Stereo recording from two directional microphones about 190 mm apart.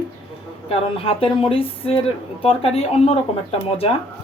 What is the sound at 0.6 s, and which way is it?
A woman's voice, 30° left (ahead or behind).